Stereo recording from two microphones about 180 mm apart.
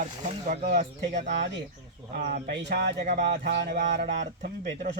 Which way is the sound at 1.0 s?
80° right.